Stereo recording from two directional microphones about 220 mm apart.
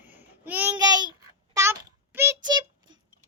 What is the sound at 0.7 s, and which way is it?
Child singing, 20° right (ahead or behind).